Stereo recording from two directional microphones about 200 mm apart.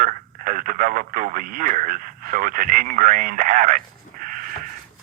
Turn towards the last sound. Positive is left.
turn(degrees=-45)  # may be behind; listen again after turning